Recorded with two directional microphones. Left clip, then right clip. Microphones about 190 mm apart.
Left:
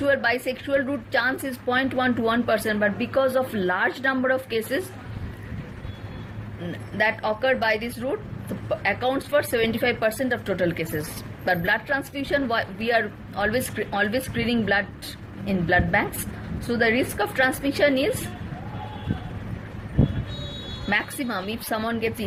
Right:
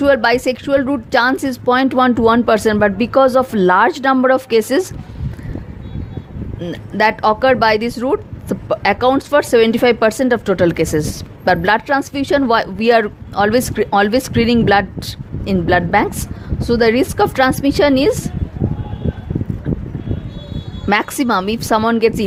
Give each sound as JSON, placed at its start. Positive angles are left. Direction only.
{"t": 0.0, "sound": "a woman's voice", "side_deg": -50}
{"t": 6.9, "sound": "a woman's voice", "side_deg": -50}
{"t": 20.9, "sound": "a woman's voice", "side_deg": -55}